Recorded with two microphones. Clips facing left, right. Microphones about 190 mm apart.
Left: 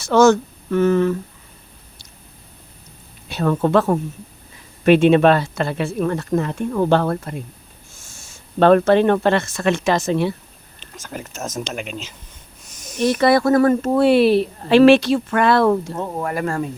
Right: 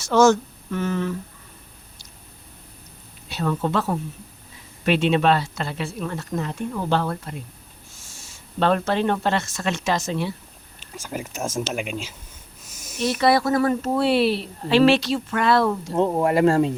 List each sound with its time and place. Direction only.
0.0 s speech: 60° left (ahead or behind)
3.2 s speech: 50° left (ahead or behind)
8.5 s speech: 55° left (ahead or behind)
10.8 s speech: 10° right (ahead or behind)
12.7 s a sound: 5° right (ahead or behind)
13.0 s speech: 50° left (ahead or behind)
16.0 s speech: 25° right (ahead or behind)